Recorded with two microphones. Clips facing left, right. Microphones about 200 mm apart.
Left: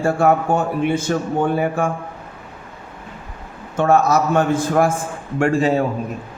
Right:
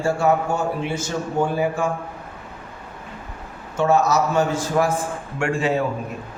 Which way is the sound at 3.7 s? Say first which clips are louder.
Left 3 dB; 55° left (ahead or behind).